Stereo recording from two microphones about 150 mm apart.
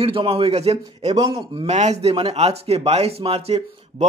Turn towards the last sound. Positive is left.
turn(degrees=-45)  # may be behind; listen again after turning